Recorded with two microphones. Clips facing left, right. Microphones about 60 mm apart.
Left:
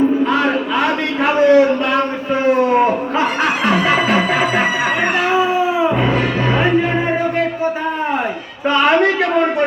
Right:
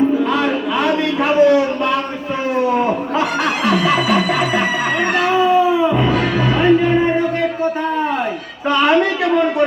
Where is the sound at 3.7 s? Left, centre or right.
Left.